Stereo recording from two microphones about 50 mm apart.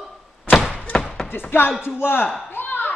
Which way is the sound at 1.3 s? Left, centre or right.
Left.